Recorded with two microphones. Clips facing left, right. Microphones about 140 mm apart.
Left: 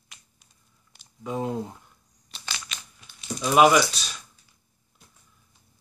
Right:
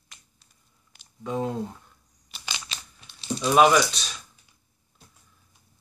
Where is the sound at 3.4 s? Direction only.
5° left (ahead or behind).